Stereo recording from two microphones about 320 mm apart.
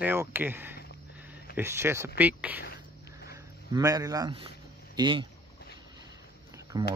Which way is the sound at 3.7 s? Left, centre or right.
Centre.